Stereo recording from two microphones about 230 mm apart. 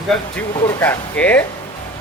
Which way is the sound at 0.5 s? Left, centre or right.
Centre.